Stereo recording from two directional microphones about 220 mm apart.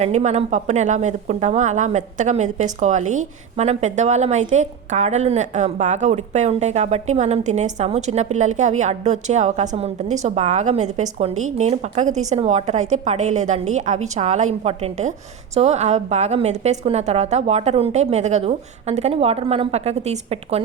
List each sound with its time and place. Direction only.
0.0 s a woman's voice: 30° right (ahead or behind)